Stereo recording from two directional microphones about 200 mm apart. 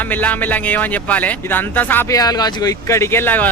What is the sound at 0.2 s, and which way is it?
Speech, 10° left (ahead or behind).